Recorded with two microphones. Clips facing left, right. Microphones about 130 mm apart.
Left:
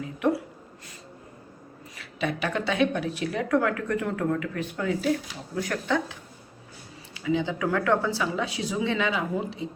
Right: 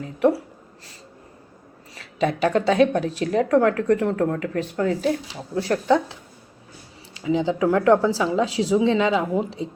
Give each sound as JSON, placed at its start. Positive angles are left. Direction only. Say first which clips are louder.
{"t": 2.0, "sound": "a woman's voice", "louder": "right 7 dB", "side_deg": -40}